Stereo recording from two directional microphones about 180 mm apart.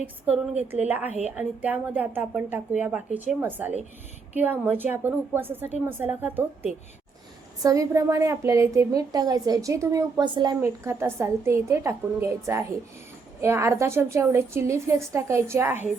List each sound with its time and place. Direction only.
0.0 s a woman's voice: 10° right (ahead or behind)